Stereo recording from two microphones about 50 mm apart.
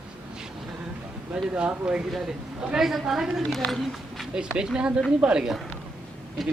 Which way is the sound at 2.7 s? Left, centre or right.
Centre.